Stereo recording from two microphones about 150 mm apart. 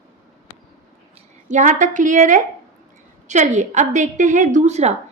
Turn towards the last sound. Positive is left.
turn(degrees=-50)  # may be behind; listen again after turning